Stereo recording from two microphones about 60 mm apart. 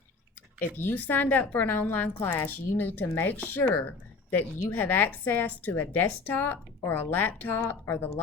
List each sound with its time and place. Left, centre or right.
0.8 s a woman's voice: left